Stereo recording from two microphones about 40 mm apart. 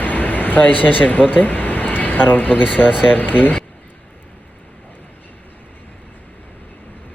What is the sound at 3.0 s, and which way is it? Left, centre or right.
Speech, left.